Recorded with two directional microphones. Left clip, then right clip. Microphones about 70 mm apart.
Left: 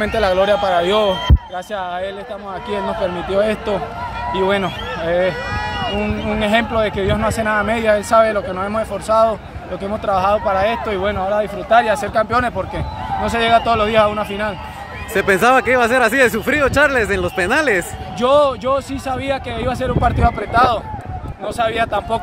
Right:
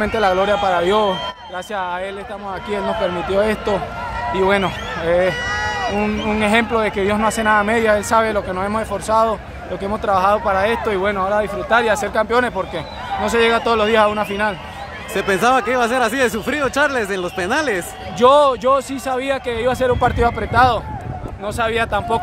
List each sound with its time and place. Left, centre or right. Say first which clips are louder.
0.0 s a man's voice: left 1 dB; right
5.0 s a sound: right 1 dB; right
6.2 s a man's voice: even; right
9.8 s a man's voice: right 1 dB; right
11.8 s speech: left 1 dB; right
15.1 s speech: left 3 dB; left
18.2 s a man's voice: right 2 dB; right